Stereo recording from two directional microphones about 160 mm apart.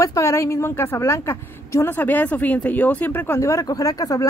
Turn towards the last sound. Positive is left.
turn(degrees=20)  # may be behind; listen again after turning